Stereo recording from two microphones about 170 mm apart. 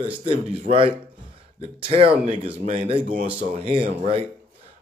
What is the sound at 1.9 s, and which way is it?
A man's voice, 35° right (ahead or behind).